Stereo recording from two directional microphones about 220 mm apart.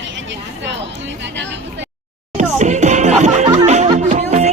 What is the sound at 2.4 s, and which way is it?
Music, 35° right (ahead or behind).